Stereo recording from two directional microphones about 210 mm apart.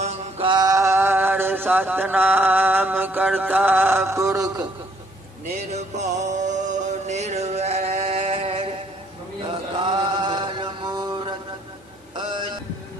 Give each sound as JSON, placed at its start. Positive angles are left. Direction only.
{"t": 0.0, "sound": "mantra", "side_deg": -30}
{"t": 5.7, "sound": "music", "side_deg": -35}
{"t": 9.5, "sound": "chant", "side_deg": -25}